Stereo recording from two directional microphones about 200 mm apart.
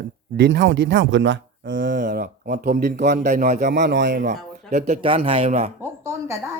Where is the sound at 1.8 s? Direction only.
40° right (ahead or behind); by 4.2 s 60° right (ahead or behind).